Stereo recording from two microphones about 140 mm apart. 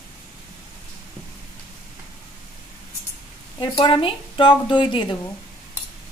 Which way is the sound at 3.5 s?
35° left (ahead or behind).